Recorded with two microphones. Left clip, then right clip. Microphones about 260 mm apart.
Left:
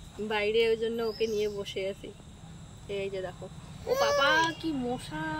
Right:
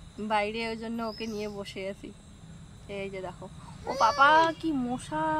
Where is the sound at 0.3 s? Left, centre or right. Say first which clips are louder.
Left 3 dB; centre.